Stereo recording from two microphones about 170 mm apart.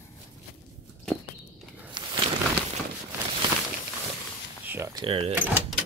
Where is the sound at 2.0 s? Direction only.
25° right (ahead or behind).